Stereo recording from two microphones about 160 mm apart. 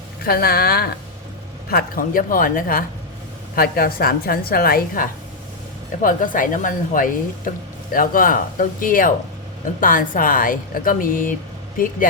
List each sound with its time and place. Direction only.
0.3 s a woman's voice: 70° left (ahead or behind)
1.7 s a woman's voice: 60° left (ahead or behind)
6.0 s a woman's voice: 60° left (ahead or behind)